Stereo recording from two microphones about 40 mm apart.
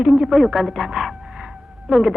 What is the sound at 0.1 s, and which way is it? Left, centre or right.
Speech, centre.